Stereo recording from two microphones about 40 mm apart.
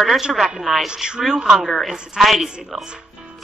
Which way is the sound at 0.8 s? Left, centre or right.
Right.